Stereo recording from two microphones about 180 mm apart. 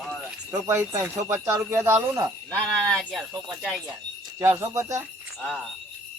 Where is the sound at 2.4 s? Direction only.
5° left (ahead or behind).